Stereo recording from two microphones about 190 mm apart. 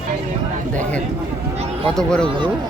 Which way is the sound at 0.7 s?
5° left (ahead or behind).